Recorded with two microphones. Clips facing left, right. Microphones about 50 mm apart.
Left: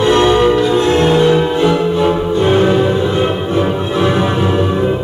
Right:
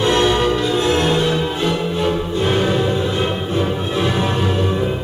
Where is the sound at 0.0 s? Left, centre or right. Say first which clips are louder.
Left 5 dB; centre.